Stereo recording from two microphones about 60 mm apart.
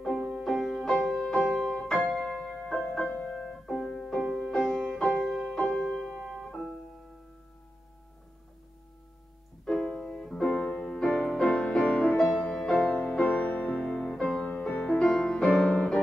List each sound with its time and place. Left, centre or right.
0.0 s music: centre
3.1 s music: centre
6.0 s piano: centre
6.4 s piano: centre
9.7 s music: centre
12.8 s music: left
15.6 s music: centre